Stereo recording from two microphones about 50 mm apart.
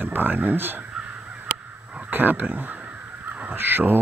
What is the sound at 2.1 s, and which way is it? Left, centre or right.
Speech, right.